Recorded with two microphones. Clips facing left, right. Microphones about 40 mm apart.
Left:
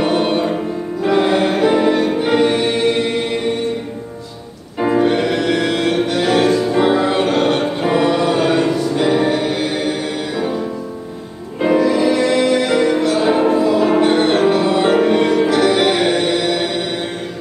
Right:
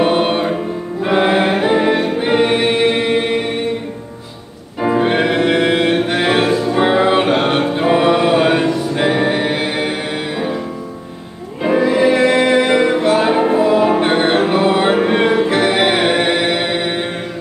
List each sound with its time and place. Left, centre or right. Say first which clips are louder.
0.0 s music: right 2 dB; right
1.0 s choir: right 1 dB; right
5.0 s music: right 1 dB; right
8.6 s music: even; centre
8.9 s music: even; right
11.7 s music: right 2 dB; right